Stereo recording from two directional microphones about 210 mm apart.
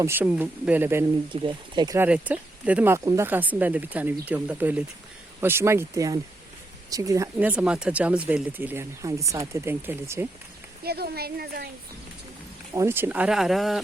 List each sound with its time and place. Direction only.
0.0 s speech: 10° right (ahead or behind)
1.3 s speech: 25° right (ahead or behind)
2.0 s speech: 5° right (ahead or behind)
10.8 s speech: 50° right (ahead or behind)
12.7 s speech: 10° right (ahead or behind)